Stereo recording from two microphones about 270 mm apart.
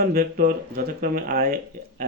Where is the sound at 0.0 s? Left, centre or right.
Right.